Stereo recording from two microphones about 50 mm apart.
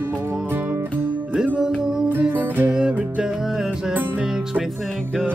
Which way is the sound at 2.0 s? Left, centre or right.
Right.